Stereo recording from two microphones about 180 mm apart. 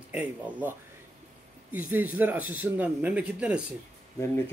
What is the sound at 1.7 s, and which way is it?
Speech, 10° right (ahead or behind).